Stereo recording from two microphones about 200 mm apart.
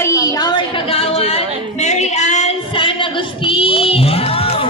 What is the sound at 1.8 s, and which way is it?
Female singing, 35° left (ahead or behind).